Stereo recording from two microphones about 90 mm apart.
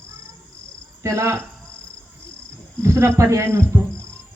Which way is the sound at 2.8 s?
35° right (ahead or behind).